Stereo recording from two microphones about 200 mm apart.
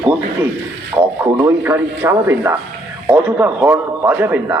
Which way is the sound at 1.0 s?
20° right (ahead or behind).